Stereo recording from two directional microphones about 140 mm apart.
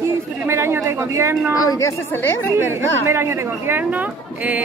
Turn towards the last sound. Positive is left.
turn(degrees=-10)  # may be behind; listen again after turning